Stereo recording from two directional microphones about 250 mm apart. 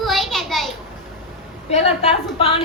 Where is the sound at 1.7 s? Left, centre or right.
Left.